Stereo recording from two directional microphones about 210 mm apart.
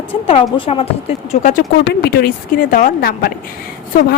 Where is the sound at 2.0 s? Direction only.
50° left (ahead or behind).